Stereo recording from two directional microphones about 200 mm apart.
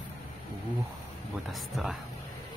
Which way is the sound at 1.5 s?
Centre (ahead or behind).